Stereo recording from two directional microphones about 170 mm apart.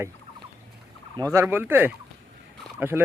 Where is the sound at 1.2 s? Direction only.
20° right (ahead or behind).